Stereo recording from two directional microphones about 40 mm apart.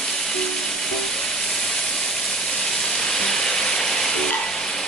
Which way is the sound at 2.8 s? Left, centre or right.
Centre.